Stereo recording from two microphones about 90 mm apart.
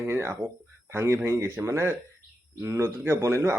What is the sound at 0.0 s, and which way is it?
A man's voice, 30° right (ahead or behind).